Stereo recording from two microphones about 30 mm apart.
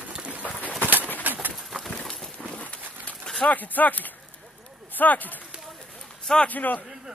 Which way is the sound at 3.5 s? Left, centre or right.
Left.